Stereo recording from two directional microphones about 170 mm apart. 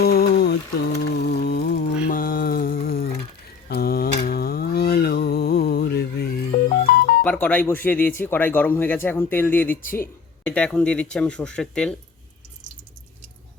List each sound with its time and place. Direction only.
0.0 s mantra: 65° left (ahead or behind)
0.9 s music: 70° left (ahead or behind)
2.0 s a sound: 55° left (ahead or behind)
7.2 s speech: 10° left (ahead or behind)